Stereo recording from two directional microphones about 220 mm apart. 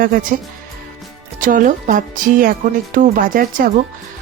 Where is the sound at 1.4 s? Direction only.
35° right (ahead or behind).